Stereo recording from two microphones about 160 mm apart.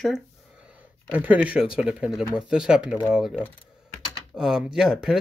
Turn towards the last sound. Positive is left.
turn(degrees=0)  # may be behind; listen again after turning